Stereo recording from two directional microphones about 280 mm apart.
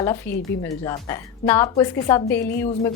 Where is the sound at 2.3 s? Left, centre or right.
Left.